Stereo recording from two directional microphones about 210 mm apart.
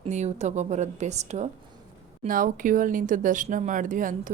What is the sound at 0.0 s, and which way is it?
A woman's voice, 35° right (ahead or behind).